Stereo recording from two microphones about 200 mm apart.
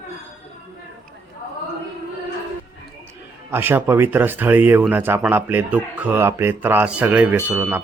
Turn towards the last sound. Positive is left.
turn(degrees=-10)  # may be behind; listen again after turning